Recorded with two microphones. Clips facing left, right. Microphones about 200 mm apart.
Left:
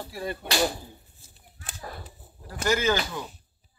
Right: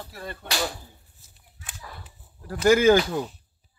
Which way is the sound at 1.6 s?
35° left (ahead or behind).